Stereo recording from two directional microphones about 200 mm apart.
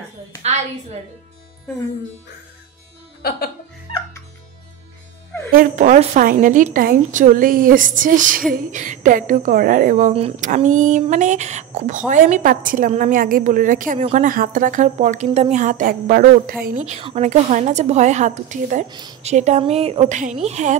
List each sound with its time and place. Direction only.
3.2 s speech: 50° left (ahead or behind)
5.5 s speech: 45° right (ahead or behind)
18.9 s a woman's voice: 20° right (ahead or behind)
19.2 s speech: 35° right (ahead or behind)